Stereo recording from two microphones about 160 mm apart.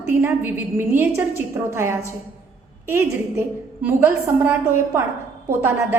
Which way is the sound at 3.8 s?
15° right (ahead or behind).